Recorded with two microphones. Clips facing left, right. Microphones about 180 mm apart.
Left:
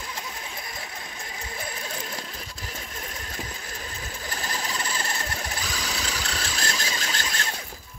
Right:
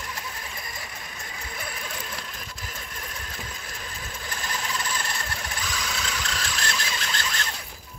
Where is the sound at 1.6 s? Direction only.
30° left (ahead or behind).